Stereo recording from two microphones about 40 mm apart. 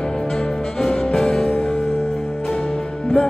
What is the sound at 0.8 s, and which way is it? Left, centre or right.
Music, centre.